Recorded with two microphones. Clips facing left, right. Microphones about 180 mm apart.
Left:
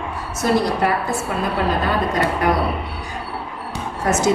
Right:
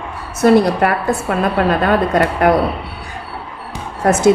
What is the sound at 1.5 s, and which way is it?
Speech, 60° right (ahead or behind).